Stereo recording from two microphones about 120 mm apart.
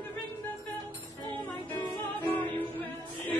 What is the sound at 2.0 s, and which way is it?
Music, 15° left (ahead or behind).